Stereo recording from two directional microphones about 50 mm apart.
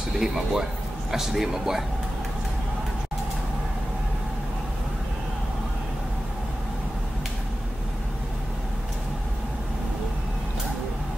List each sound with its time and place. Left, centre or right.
0.2 s a man's voice: centre